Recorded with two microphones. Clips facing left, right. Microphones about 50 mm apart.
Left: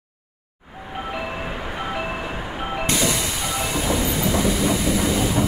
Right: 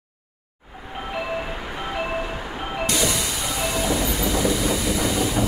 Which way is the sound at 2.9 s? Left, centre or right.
Left.